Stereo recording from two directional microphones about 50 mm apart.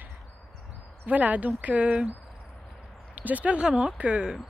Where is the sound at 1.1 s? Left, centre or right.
Right.